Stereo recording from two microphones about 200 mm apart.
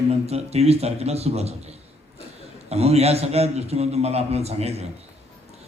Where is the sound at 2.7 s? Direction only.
30° right (ahead or behind).